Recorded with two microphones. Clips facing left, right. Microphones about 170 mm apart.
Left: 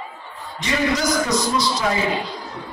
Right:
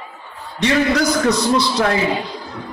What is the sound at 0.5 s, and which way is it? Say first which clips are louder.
Music: right 5 dB; 65° right (ahead or behind).